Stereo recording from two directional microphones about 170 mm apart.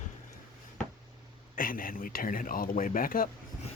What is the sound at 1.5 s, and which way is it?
Speech, 55° left (ahead or behind).